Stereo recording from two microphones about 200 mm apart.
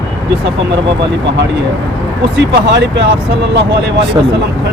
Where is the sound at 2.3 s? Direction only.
60° right (ahead or behind).